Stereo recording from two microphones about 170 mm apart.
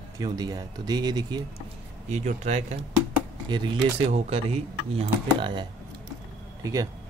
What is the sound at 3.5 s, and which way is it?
Speech, 30° right (ahead or behind).